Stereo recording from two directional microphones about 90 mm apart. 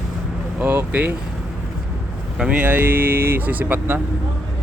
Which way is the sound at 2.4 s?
15° right (ahead or behind).